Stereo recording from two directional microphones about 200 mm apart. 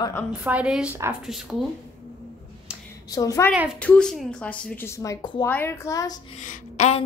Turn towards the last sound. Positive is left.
turn(degrees=35)  # may be behind; listen again after turning